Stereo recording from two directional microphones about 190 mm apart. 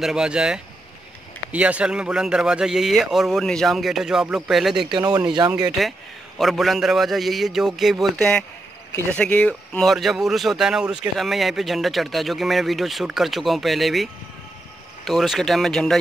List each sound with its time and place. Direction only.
0.0 s speech: 5° right (ahead or behind)
4.9 s speech: 20° right (ahead or behind)
5.8 s speech: centre (ahead or behind)